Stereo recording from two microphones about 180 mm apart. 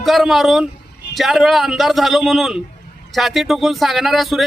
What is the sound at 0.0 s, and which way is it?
A man's voice, centre (ahead or behind).